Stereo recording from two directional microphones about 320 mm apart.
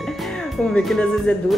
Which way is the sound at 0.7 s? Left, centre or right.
Centre.